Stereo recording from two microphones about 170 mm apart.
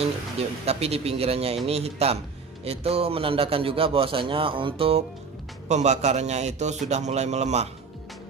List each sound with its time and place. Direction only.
0.0 s a man's voice: 35° right (ahead or behind)